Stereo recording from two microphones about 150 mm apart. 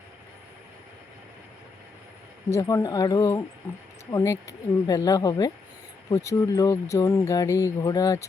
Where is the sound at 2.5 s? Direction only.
20° left (ahead or behind).